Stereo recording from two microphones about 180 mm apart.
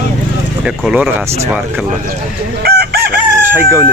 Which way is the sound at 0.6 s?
5° right (ahead or behind).